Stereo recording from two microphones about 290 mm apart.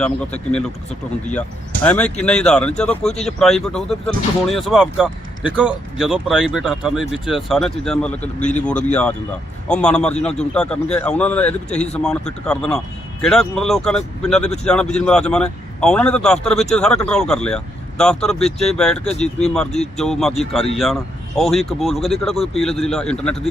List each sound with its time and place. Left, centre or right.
1.3 s speech: centre